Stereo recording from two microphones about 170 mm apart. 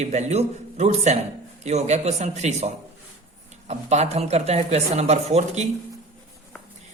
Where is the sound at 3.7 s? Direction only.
40° right (ahead or behind).